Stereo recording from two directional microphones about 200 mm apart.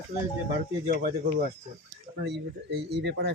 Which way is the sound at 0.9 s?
45° right (ahead or behind).